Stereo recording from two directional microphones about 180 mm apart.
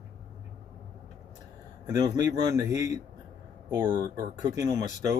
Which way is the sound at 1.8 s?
20° right (ahead or behind).